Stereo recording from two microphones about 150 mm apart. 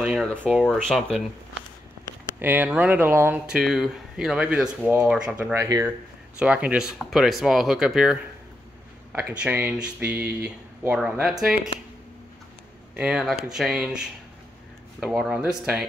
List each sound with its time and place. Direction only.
0.1 s speech: 5° left (ahead or behind)
2.4 s speech: 10° right (ahead or behind)
3.5 s speech: 5° right (ahead or behind); by 5.9 s 20° right (ahead or behind)
6.4 s speech: 10° right (ahead or behind)
12.9 s speech: 5° right (ahead or behind)